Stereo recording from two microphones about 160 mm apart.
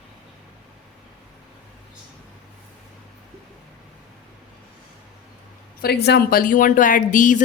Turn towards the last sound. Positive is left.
turn(degrees=55)  # may be behind; listen again after turning